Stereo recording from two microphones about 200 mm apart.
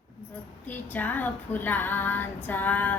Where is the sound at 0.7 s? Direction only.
10° left (ahead or behind).